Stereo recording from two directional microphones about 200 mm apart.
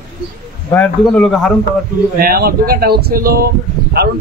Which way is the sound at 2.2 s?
50° right (ahead or behind).